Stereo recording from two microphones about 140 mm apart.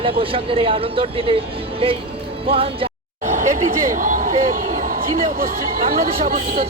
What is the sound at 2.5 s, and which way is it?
Speech, 40° right (ahead or behind).